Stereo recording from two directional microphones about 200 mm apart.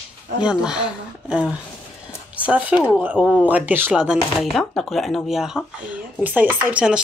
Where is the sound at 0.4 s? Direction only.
5° right (ahead or behind).